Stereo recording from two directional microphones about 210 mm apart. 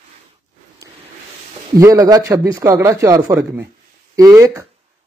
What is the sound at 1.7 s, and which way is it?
Speech, 15° right (ahead or behind).